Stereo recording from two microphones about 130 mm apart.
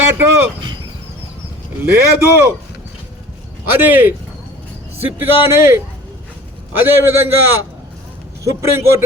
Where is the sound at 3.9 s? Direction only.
15° right (ahead or behind).